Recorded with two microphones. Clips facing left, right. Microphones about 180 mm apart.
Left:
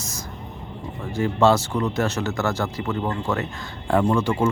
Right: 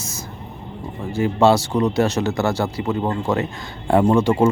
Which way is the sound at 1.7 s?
20° right (ahead or behind).